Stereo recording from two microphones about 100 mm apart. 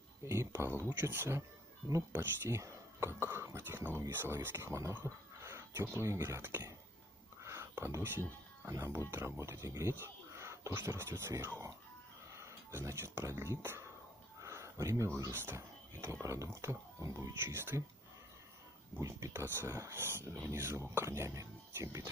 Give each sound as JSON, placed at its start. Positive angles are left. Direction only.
{"t": 0.2, "sound": "speech", "side_deg": -30}
{"t": 14.4, "sound": "a sound", "side_deg": -30}
{"t": 15.3, "sound": "speech", "side_deg": -25}
{"t": 18.9, "sound": "speech", "side_deg": -35}